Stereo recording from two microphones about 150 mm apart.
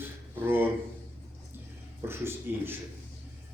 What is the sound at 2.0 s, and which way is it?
Speech, 15° right (ahead or behind).